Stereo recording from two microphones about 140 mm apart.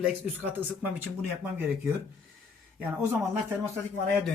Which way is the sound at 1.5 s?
15° right (ahead or behind).